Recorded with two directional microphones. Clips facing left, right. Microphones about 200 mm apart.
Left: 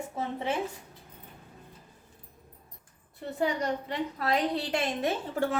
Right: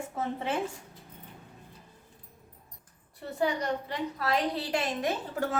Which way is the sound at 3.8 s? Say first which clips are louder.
Left 1 dB; 20° left (ahead or behind).